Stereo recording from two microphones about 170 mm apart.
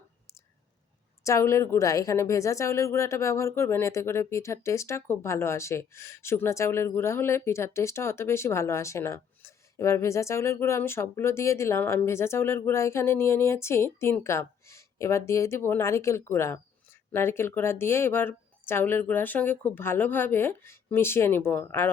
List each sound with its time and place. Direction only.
1.2 s a woman's voice: 15° left (ahead or behind)